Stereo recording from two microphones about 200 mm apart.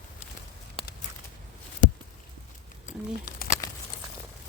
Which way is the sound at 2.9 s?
35° left (ahead or behind).